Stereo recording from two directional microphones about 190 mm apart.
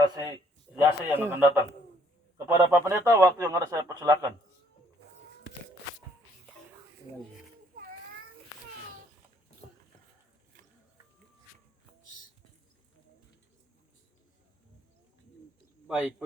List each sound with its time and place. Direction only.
0.0 s a sound: 20° right (ahead or behind)
0.8 s speech: 10° right (ahead or behind)
2.5 s speech: 15° right (ahead or behind)
15.9 s speech: 10° right (ahead or behind)